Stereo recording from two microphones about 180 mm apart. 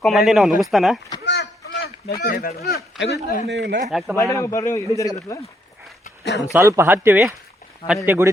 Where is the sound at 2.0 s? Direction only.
55° left (ahead or behind).